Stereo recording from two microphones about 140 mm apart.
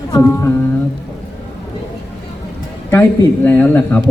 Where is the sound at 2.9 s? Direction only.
15° left (ahead or behind).